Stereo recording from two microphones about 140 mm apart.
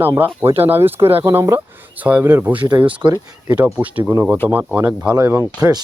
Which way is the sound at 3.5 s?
10° right (ahead or behind).